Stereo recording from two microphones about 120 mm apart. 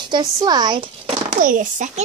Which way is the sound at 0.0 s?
35° right (ahead or behind).